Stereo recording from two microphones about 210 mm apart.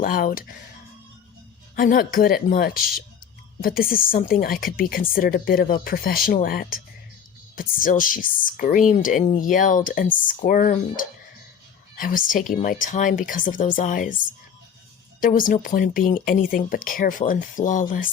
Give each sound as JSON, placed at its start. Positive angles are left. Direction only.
{"t": 0.0, "sound": "a woman's voice", "side_deg": 40}
{"t": 1.7, "sound": "a woman's voice", "side_deg": 40}
{"t": 15.2, "sound": "speech", "side_deg": 40}